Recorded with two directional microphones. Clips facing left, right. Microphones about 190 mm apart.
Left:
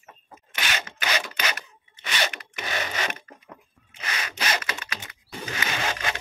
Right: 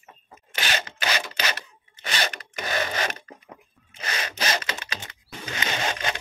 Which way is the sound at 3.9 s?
35° right (ahead or behind).